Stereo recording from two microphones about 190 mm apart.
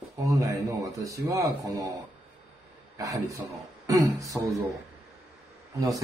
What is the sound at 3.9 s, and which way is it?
Speech, 20° right (ahead or behind).